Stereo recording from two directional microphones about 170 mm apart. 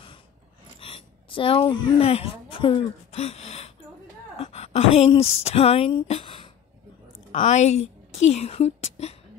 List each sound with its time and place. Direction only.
0.7 s speech: 30° left (ahead or behind)
7.3 s a woman's voice: 45° left (ahead or behind)